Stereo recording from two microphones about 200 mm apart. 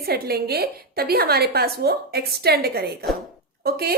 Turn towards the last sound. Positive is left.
turn(degrees=-50)  # may be behind; listen again after turning